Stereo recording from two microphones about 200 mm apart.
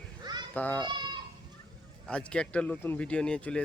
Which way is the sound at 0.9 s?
20° right (ahead or behind).